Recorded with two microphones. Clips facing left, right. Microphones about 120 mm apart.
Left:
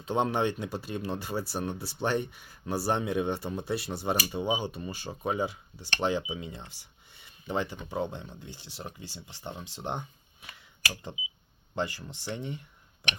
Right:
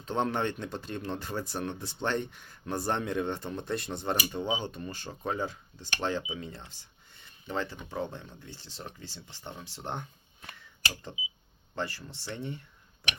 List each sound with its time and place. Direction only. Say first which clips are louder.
0.0 s speech: left 2 dB; 15° left (ahead or behind)
11.7 s speech: left 3 dB; 15° left (ahead or behind)